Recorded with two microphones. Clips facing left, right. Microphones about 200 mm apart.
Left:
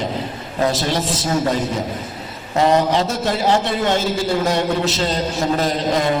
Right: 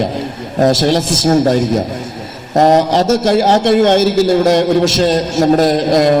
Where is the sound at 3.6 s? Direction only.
80° right.